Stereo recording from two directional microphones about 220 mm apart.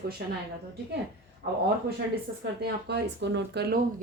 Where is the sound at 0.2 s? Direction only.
50° right (ahead or behind).